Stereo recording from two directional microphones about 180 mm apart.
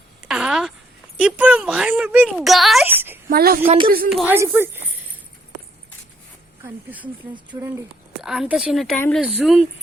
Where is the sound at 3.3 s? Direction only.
55° right (ahead or behind).